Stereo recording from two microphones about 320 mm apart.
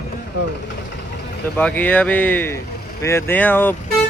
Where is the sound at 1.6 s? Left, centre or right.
Centre.